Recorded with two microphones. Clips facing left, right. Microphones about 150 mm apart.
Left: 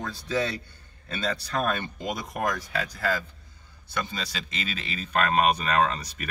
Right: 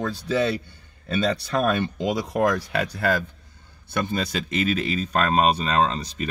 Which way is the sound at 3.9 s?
55° right (ahead or behind).